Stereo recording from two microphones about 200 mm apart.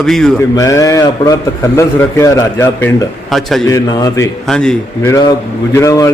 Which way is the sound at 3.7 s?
20° left (ahead or behind).